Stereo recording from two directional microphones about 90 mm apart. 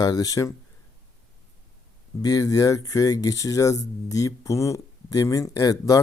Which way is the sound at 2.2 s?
45° left (ahead or behind).